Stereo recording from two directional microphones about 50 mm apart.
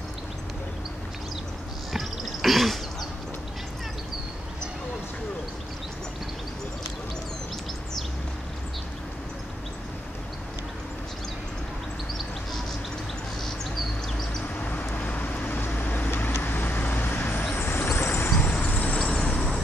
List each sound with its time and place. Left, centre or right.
1.9 s a sound: centre
14.6 s vehicle: left
18.6 s vehicle: left
19.0 s vehicle: centre